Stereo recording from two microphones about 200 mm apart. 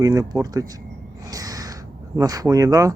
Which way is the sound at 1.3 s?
20° right (ahead or behind).